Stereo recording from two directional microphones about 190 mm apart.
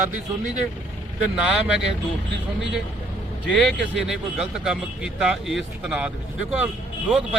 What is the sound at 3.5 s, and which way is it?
Speech, centre (ahead or behind).